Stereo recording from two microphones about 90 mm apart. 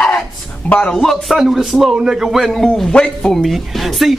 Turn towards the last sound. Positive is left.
turn(degrees=0)  # may be behind; listen again after turning